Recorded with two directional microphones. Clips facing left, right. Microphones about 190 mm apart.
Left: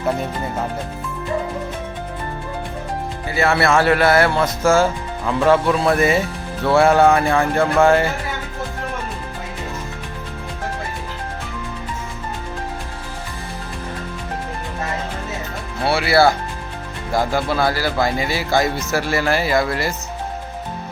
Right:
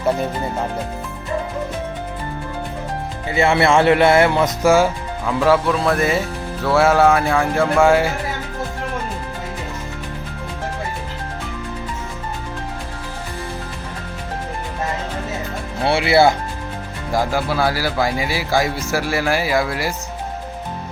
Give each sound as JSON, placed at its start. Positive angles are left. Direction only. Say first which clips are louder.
{"t": 3.2, "sound": "speech", "louder": "right 2 dB", "side_deg": -20}
{"t": 5.2, "sound": "music", "louder": "even", "side_deg": 0}
{"t": 15.9, "sound": "speech", "louder": "right 1 dB", "side_deg": -20}
{"t": 17.1, "sound": "speech", "louder": "even", "side_deg": -10}